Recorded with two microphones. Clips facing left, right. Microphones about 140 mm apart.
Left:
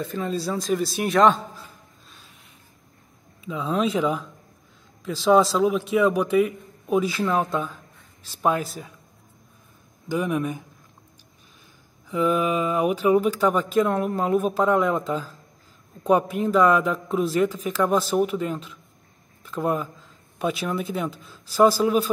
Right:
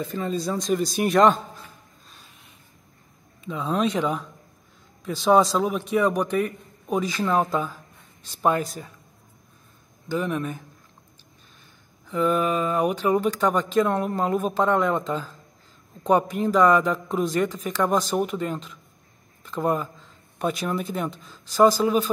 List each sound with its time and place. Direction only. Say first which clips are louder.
0.0 s speech: even; centre (ahead or behind)
3.3 s speech: even; centre (ahead or behind)
10.0 s speech: left 2 dB; 10° left (ahead or behind)
12.1 s speech: even; 10° left (ahead or behind)